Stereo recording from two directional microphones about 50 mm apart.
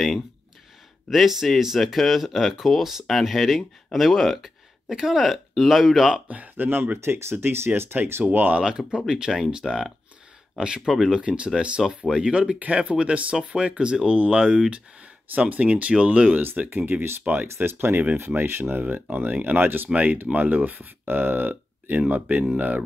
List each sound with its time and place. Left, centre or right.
1.1 s speech: centre
6.2 s speech: right
7.0 s speech: right
8.5 s speech: centre
10.9 s speech: centre
11.1 s speech: right
16.3 s speech: right
17.2 s speech: right
17.6 s speech: right
19.9 s speech: right